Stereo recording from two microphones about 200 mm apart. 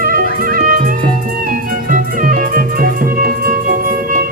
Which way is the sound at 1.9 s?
45° right (ahead or behind).